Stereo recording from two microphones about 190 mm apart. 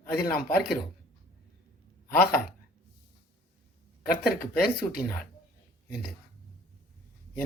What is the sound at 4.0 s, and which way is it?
Speech, 55° left (ahead or behind).